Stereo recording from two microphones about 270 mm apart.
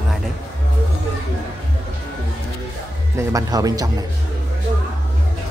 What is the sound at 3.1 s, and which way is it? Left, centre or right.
Speech, centre.